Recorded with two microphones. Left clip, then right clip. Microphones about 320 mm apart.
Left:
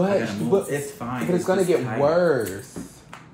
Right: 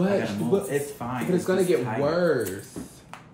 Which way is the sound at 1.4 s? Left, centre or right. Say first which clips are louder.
Left 3 dB; centre.